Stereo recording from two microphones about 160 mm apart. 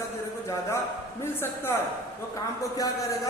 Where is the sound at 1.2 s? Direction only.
15° left (ahead or behind).